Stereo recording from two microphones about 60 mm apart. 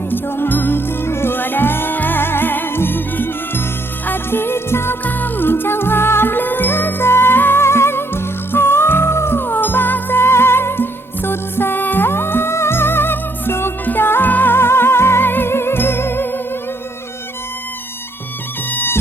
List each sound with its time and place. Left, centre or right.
0.1 s music: left
5.0 s music: left
18.7 s music: left